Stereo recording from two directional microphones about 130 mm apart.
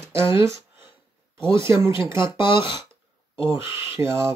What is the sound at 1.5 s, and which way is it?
Speech, 20° right (ahead or behind).